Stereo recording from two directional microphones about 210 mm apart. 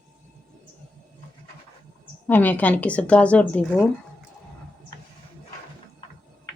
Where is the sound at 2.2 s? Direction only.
10° left (ahead or behind).